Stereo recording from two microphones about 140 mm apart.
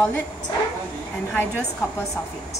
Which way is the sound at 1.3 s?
5° left (ahead or behind).